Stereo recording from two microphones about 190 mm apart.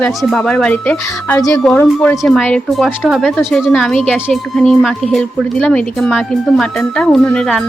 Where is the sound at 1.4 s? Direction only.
20° left (ahead or behind).